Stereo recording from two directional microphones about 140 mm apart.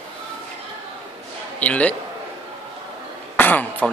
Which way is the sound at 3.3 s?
10° left (ahead or behind).